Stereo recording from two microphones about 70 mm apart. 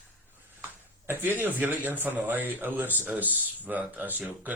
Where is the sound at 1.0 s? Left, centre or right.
Right.